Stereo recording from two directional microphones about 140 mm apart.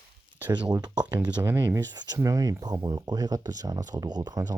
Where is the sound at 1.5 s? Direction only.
15° right (ahead or behind).